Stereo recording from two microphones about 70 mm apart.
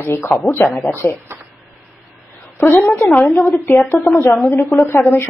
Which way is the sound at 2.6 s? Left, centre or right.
Left.